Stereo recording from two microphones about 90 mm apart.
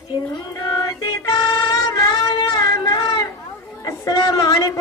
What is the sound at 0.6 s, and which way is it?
Music, 50° left (ahead or behind).